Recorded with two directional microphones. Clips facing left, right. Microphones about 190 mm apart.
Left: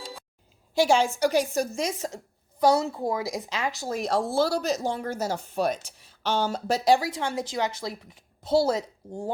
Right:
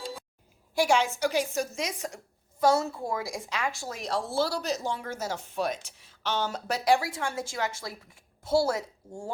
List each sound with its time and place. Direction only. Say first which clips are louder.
0.8 s speech: left 3 dB; 30° left (ahead or behind)
3.7 s speech: left 6 dB; 35° left (ahead or behind); by 9.3 s 20° left (ahead or behind)